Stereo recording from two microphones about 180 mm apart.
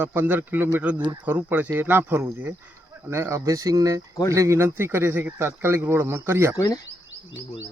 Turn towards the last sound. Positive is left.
turn(degrees=20)  # may be behind; listen again after turning